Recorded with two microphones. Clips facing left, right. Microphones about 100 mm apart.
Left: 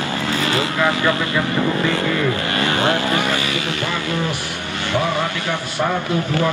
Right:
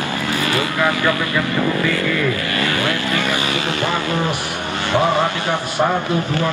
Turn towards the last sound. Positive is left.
turn(degrees=-25)  # may be behind; listen again after turning